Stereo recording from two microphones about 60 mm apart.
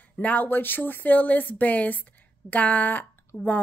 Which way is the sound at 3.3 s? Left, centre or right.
Left.